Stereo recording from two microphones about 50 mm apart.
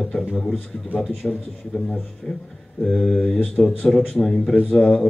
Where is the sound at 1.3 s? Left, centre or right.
Centre.